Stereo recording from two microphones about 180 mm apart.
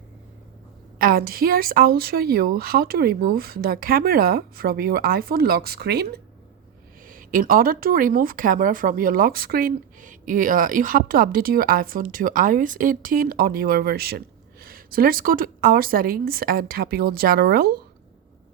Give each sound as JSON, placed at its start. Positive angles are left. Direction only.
{"t": 0.9, "sound": "a woman's voice", "side_deg": -55}
{"t": 7.0, "sound": "speech", "side_deg": -50}